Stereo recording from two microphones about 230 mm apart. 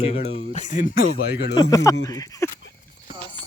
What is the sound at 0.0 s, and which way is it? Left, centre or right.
Speech, left.